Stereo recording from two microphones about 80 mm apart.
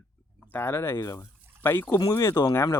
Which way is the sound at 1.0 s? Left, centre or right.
Left.